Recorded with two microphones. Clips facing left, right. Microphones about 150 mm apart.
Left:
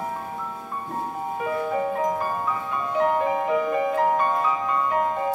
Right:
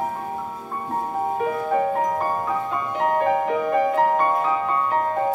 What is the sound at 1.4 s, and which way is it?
Music, 50° right (ahead or behind).